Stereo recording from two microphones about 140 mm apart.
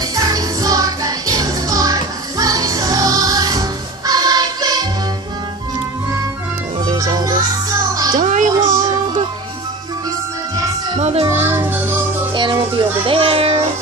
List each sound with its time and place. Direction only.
0.1 s music: 25° right (ahead or behind)
6.8 s music: 30° right (ahead or behind)
8.2 s music: 65° right (ahead or behind)
11.0 s music: 50° right (ahead or behind)
11.2 s music: 20° right (ahead or behind)
12.4 s music: 35° right (ahead or behind)
13.0 s child singing: 40° right (ahead or behind)